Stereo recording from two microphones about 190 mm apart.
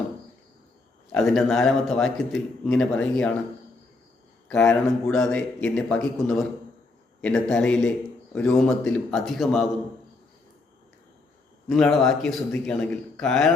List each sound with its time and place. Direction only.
1.1 s a man's voice: centre (ahead or behind)
4.4 s a man's voice: 5° left (ahead or behind)
11.7 s a man's voice: centre (ahead or behind)